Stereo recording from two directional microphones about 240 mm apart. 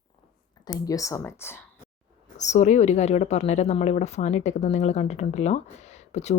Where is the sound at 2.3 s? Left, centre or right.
Left.